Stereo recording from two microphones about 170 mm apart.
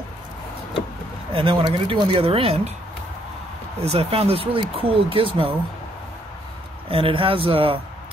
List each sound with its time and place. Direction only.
1.3 s speech: 30° right (ahead or behind)
3.8 s speech: 35° right (ahead or behind)
6.9 s speech: 30° right (ahead or behind)